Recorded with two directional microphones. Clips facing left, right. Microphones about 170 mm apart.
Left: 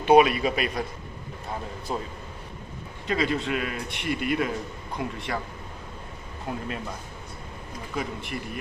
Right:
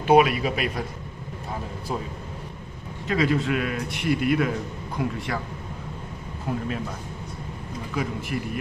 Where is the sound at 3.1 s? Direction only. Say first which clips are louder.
Right 3 dB; centre (ahead or behind).